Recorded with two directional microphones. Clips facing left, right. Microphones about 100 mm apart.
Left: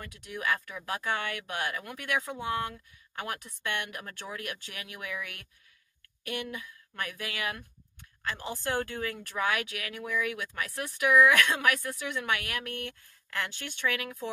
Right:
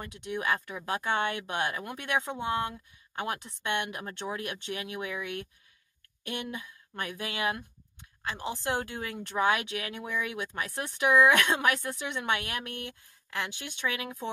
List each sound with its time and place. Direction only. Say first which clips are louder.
0.0 s speech: right 2 dB; 25° right (ahead or behind)